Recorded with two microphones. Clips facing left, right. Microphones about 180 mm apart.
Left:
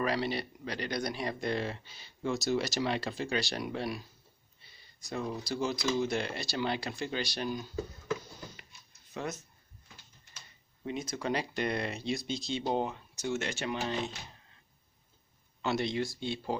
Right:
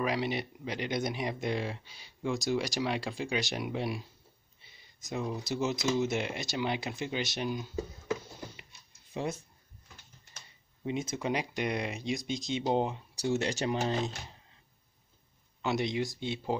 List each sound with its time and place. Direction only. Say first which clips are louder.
0.0 s speech: even; 15° right (ahead or behind)
5.0 s speech: right 1 dB; 15° right (ahead or behind)
9.1 s speech: right 3 dB; 25° right (ahead or behind)
11.0 s speech: even; 25° right (ahead or behind)
13.1 s speech: right 4 dB; 35° right (ahead or behind)
15.6 s speech: right 1 dB; 15° right (ahead or behind)